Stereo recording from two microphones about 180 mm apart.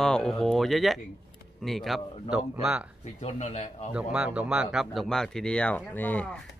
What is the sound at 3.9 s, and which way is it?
Speech, 5° right (ahead or behind).